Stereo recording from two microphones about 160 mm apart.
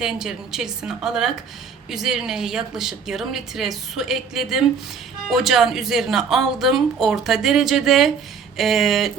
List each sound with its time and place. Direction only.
0.0 s speech: 5° right (ahead or behind)